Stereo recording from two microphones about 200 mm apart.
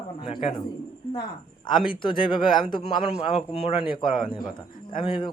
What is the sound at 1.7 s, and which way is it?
A man's voice, 25° left (ahead or behind).